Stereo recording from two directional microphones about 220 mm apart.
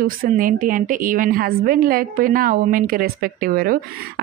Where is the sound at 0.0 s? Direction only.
40° right (ahead or behind).